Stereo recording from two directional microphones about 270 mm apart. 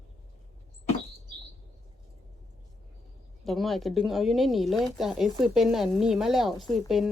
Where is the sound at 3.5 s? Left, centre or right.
Centre.